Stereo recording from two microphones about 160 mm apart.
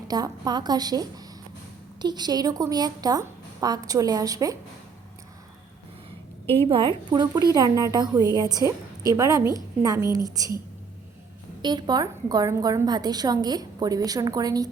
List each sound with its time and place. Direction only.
0.1 s a woman's voice: 25° right (ahead or behind)
6.4 s a woman's voice: 15° left (ahead or behind)
6.7 s a woman's voice: 30° right (ahead or behind)
11.6 s a woman's voice: 25° right (ahead or behind)